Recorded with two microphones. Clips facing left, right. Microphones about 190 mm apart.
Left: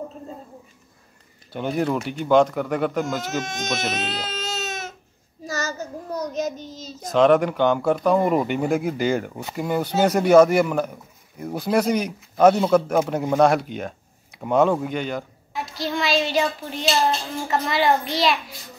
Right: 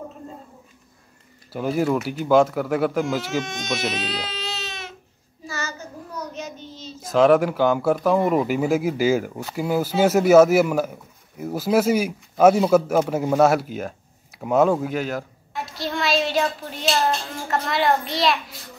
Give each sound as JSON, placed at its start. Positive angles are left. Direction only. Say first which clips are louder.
{"t": 1.5, "sound": "speech", "louder": "right 2 dB", "side_deg": -5}
{"t": 3.3, "sound": "speech", "louder": "right 1 dB", "side_deg": 45}
{"t": 5.5, "sound": "child singing", "louder": "left 4 dB", "side_deg": 40}
{"t": 7.0, "sound": "speech", "louder": "right 1 dB", "side_deg": -5}